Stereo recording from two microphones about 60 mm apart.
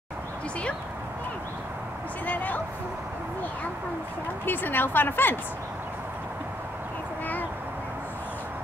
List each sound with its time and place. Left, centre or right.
2.2 s bow-wow: left
4.5 s a woman's voice: left